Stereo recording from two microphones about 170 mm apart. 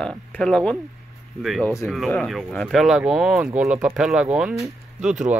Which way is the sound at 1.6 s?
20° left (ahead or behind).